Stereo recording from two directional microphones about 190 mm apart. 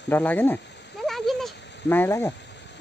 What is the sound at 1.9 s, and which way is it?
Speech, 10° left (ahead or behind).